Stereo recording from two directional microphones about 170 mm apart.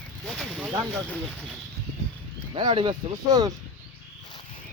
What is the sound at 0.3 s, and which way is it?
Speech, 5° left (ahead or behind).